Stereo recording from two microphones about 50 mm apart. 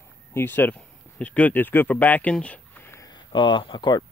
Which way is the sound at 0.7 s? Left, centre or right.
Left.